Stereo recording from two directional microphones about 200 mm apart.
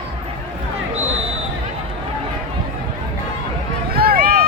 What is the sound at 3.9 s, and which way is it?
Run, 50° right (ahead or behind).